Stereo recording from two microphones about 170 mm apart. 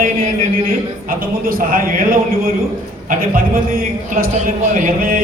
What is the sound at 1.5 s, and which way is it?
A man's voice, 55° right (ahead or behind).